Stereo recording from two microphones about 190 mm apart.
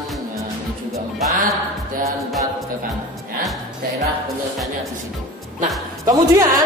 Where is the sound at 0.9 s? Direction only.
15° right (ahead or behind).